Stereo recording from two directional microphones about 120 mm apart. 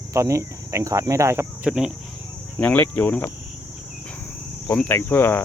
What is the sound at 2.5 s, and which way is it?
Speech, 15° left (ahead or behind).